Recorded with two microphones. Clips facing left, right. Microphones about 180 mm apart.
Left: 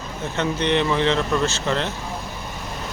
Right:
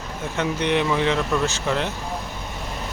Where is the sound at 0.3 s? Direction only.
10° right (ahead or behind).